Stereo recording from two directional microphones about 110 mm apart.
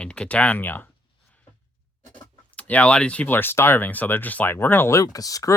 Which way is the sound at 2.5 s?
15° left (ahead or behind).